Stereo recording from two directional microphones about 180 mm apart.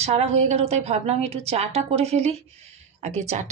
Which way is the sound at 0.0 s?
35° right (ahead or behind).